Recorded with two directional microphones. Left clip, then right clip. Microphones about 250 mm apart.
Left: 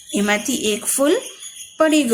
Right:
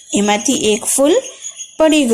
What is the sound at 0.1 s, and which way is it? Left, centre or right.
A woman's voice, centre.